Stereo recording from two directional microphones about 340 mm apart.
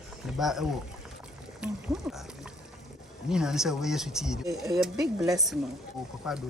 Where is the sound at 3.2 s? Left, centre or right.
Centre.